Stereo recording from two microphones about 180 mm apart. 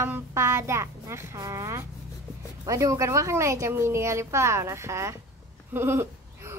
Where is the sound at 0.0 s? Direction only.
15° right (ahead or behind).